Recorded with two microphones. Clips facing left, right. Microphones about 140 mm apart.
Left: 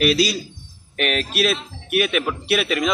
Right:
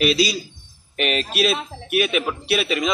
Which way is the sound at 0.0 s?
Centre (ahead or behind).